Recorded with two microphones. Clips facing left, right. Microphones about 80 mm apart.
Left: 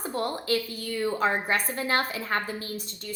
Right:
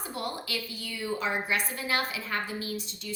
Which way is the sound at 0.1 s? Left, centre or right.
Left.